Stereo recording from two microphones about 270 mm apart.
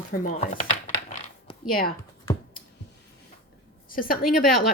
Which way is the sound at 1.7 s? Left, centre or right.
Left.